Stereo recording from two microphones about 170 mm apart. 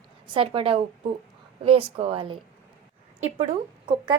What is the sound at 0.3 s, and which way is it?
A woman's voice, 30° right (ahead or behind).